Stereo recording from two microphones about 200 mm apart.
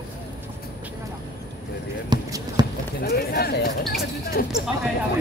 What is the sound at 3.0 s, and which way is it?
Speech, 50° left (ahead or behind).